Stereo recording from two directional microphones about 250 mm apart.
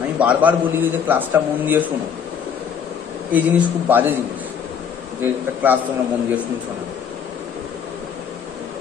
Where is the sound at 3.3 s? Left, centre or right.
Centre.